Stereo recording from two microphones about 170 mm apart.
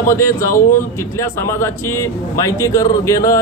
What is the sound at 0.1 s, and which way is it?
A man's voice, 15° left (ahead or behind).